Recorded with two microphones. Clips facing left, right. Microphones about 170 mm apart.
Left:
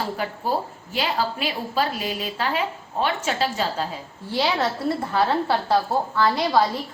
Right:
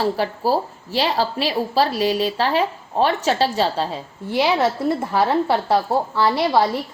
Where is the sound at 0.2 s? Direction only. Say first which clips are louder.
Right 5 dB; 35° right (ahead or behind).